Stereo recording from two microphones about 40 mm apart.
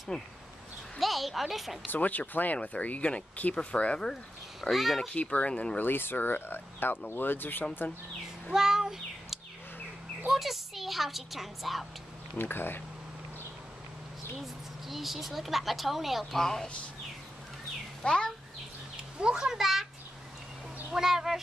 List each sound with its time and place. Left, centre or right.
0.1 s speech: left
0.9 s a woman's voice: centre
1.9 s speech: left
4.6 s a woman's voice: centre
5.0 s speech: left
5.8 s speech: left
8.5 s meow: centre
10.3 s a woman's voice: centre
12.4 s speech: left
14.4 s a woman's voice: centre
16.3 s a woman's voice: centre
18.0 s speech: left
19.1 s a child's voice: centre
20.9 s speech: centre